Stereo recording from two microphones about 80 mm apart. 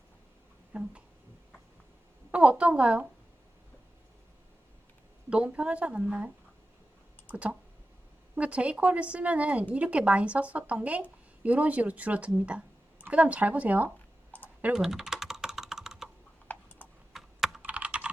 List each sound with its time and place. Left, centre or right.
0.7 s speech: centre
2.3 s a woman's voice: centre
5.3 s a woman's voice: centre
14.8 s typing: centre
16.5 s computer keyboard: left
17.1 s computer keyboard: centre
17.6 s computer keyboard: centre